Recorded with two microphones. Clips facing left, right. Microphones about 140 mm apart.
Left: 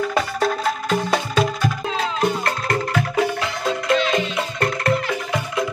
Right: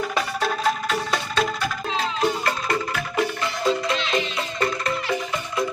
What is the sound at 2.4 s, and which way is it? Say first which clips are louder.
Music: left 2 dB; 70° left (ahead or behind).